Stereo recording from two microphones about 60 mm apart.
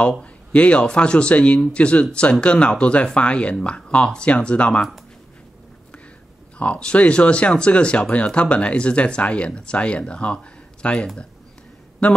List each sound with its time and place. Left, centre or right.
0.2 s a man's voice: centre
6.6 s speech: centre